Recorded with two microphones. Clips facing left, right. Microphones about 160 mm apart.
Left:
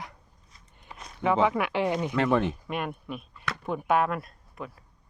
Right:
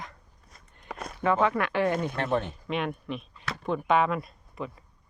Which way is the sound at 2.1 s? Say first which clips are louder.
Left 4 dB; 90° left.